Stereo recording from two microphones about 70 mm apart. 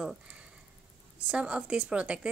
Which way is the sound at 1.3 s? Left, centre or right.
Centre.